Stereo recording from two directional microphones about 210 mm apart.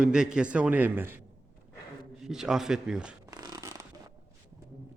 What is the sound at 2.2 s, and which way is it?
Speech, centre (ahead or behind).